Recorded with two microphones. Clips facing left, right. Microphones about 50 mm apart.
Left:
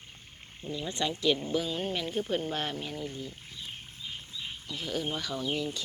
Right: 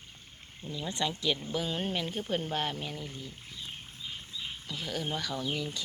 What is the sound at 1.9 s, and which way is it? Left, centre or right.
Speech, centre.